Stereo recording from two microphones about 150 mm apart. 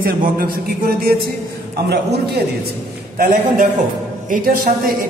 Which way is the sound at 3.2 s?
65° right (ahead or behind).